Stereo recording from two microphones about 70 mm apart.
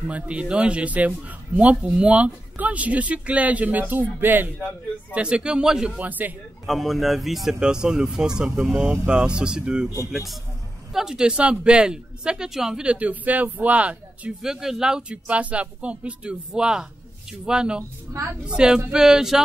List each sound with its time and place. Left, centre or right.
0.1 s speech: centre
5.1 s speech: centre
5.9 s speech: right
6.6 s speech: centre
10.9 s speech: centre
14.4 s speech: centre
18.1 s a woman's voice: right
18.4 s speech: centre